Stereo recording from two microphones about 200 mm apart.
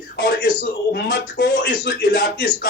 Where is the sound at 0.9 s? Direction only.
55° left (ahead or behind).